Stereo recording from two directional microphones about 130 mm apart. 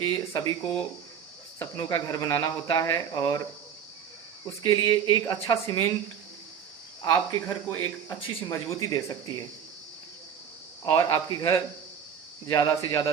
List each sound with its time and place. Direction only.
0.0 s speech: 30° left (ahead or behind)
1.8 s speech: 30° left (ahead or behind)
4.4 s speech: 30° left (ahead or behind)
7.0 s speech: 30° left (ahead or behind)
10.8 s speech: 30° left (ahead or behind)